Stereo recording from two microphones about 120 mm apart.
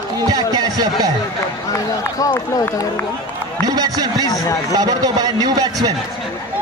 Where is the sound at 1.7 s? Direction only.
30° left (ahead or behind).